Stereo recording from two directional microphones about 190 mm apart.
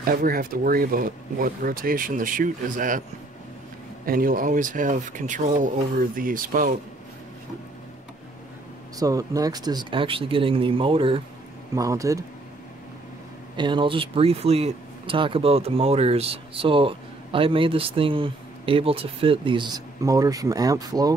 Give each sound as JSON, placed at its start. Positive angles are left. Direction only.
{"t": 0.0, "sound": "speech", "side_deg": -50}
{"t": 4.0, "sound": "speech", "side_deg": -50}
{"t": 9.0, "sound": "speech", "side_deg": -20}
{"t": 11.7, "sound": "speech", "side_deg": -15}
{"t": 13.6, "sound": "speech", "side_deg": -25}